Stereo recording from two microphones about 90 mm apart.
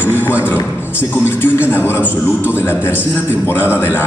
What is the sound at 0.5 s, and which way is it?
A man's voice, 25° left (ahead or behind).